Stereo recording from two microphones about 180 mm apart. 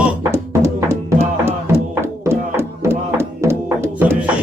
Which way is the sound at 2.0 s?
15° right (ahead or behind).